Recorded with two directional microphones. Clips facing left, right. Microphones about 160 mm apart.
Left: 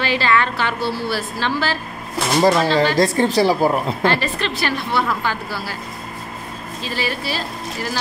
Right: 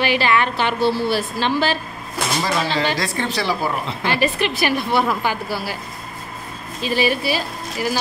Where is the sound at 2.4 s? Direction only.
45° left (ahead or behind).